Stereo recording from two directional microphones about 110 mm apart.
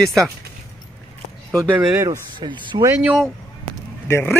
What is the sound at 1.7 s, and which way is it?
Speech, 15° right (ahead or behind).